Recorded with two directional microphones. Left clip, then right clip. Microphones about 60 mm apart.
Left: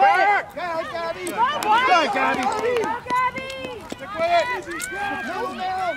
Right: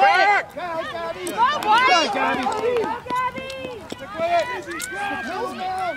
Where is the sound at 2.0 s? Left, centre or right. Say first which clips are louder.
Left 1 dB; left.